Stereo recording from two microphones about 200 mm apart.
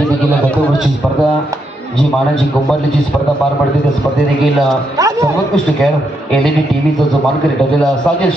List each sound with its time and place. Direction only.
4.9 s a man's voice: 15° right (ahead or behind)
7.8 s a man's voice: 5° left (ahead or behind)